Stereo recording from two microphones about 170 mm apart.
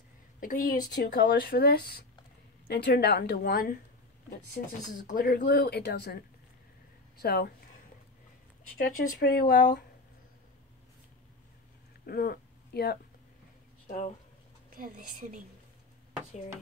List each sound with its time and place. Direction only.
0.4 s a woman's voice: 55° left (ahead or behind)
0.9 s speech: 90° left; by 3.7 s 60° left (ahead or behind)
4.9 s speech: 55° left (ahead or behind); by 7.5 s 70° left (ahead or behind)
8.7 s speech: 70° left (ahead or behind)
12.1 s speech: 65° left (ahead or behind)
13.8 s speech: 50° left (ahead or behind)
14.8 s a woman's voice: 60° right (ahead or behind)